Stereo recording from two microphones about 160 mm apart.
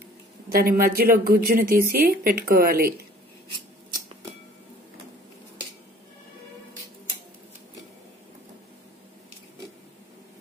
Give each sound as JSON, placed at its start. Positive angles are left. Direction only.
{"t": 0.5, "sound": "a woman's voice", "side_deg": -65}